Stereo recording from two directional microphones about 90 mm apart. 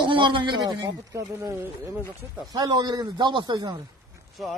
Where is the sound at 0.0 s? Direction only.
65° right (ahead or behind).